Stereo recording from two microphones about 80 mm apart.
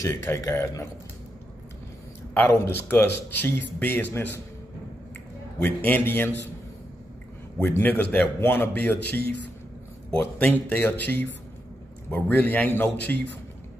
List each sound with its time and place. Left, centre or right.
0.0 s a man's voice: left
2.3 s a man's voice: left
5.6 s a man's voice: left
7.6 s a man's voice: left